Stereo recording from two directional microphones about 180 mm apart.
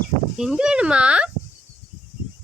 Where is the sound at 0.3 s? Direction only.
5° right (ahead or behind).